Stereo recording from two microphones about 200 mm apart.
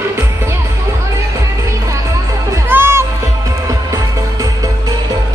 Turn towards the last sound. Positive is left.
turn(degrees=-15)  # may be behind; listen again after turning